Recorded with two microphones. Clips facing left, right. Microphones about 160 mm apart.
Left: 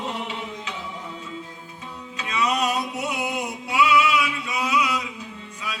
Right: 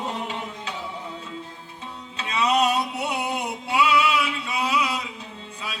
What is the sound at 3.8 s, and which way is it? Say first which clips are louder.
Male singing: left 2 dB; 30° right (ahead or behind).